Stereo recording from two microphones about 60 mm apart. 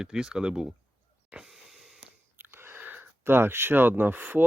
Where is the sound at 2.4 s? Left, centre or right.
Right.